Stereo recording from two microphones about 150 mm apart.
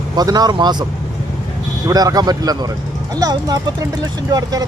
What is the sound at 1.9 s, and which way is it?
Speech, 25° right (ahead or behind).